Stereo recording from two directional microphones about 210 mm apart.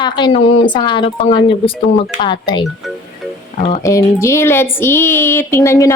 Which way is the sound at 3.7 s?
15° left (ahead or behind).